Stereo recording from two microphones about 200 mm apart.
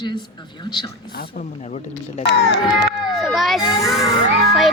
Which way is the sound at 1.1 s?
35° left (ahead or behind).